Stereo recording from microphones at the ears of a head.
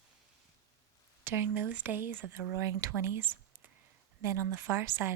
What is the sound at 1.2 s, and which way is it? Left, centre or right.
A woman's voice, right.